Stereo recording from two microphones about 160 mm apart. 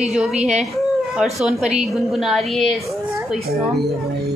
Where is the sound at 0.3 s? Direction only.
45° right (ahead or behind).